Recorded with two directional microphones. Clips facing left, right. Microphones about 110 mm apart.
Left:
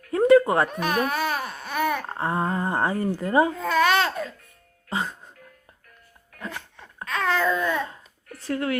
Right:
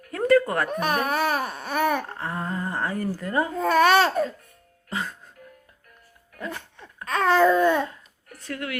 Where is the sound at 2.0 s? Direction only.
30° left (ahead or behind).